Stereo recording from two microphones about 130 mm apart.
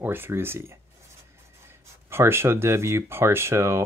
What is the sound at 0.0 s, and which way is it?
Speech, 15° right (ahead or behind).